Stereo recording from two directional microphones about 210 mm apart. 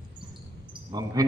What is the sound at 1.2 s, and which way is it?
Speech, 15° right (ahead or behind).